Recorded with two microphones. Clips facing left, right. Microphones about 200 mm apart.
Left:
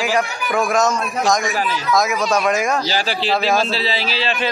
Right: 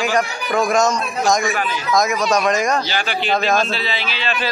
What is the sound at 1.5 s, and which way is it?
Speech, 35° left (ahead or behind).